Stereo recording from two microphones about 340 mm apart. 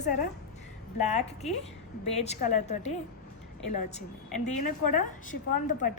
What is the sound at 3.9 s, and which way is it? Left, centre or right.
A woman's voice, left.